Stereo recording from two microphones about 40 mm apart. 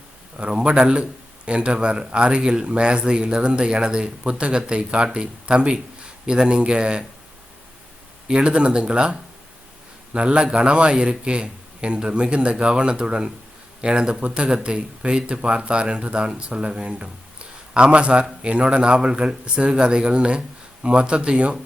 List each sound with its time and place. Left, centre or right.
0.3 s speech: right
8.3 s speech: right